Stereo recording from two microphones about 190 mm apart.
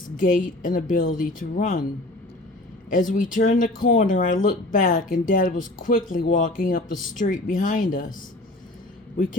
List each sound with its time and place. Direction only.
0.2 s speech: 45° left (ahead or behind)
2.9 s speech: 45° left (ahead or behind)